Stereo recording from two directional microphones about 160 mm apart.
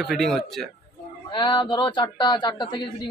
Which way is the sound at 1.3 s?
30° left (ahead or behind).